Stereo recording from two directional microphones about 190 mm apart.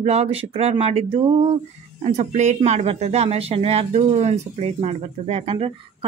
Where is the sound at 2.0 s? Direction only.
40° right (ahead or behind).